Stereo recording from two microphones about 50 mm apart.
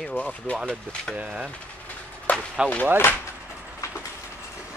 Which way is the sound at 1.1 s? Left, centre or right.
Right.